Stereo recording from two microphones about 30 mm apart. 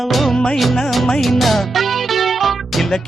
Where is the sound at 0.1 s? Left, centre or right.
Centre.